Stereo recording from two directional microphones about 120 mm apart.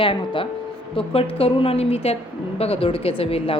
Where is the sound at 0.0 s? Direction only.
45° left (ahead or behind).